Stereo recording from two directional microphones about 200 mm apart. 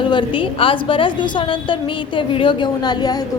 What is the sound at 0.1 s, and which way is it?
A woman's voice, 25° left (ahead or behind).